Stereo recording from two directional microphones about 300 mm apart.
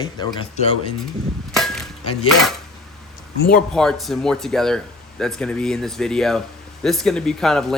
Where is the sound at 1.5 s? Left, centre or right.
Centre.